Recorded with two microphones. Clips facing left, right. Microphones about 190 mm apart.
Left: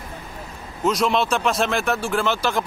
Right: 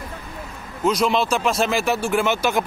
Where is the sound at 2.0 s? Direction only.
15° right (ahead or behind).